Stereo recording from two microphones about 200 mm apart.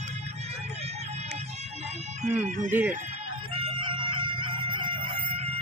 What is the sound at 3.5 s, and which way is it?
Chicken, 25° right (ahead or behind).